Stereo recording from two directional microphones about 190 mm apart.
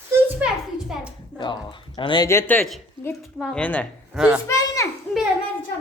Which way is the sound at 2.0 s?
25° left (ahead or behind).